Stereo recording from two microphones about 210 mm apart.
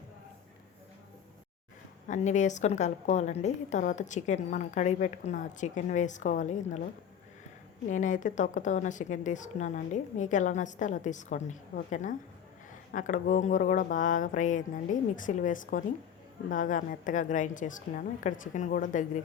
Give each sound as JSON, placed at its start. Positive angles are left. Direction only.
{"t": 2.0, "sound": "a woman's voice", "side_deg": 35}
{"t": 7.9, "sound": "a woman's voice", "side_deg": 35}